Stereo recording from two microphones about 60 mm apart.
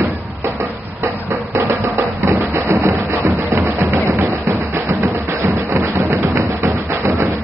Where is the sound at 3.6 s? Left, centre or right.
Right.